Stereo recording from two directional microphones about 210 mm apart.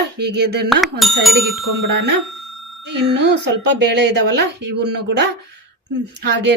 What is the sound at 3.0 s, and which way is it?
Speech, 55° right (ahead or behind).